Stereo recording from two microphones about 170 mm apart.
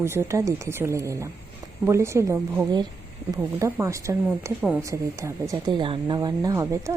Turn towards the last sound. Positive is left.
turn(degrees=-20)  # may be behind; listen again after turning